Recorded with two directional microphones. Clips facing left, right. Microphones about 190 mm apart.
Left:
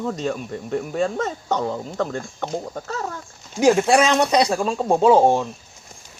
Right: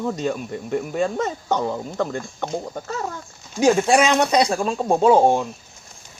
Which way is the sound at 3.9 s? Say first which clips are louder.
Even; 10° right (ahead or behind).